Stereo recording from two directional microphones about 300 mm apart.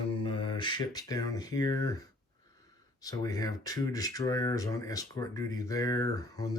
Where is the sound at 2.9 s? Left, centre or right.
Centre.